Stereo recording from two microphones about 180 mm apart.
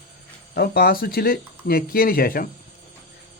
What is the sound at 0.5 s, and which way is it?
Speech, 60° left (ahead or behind).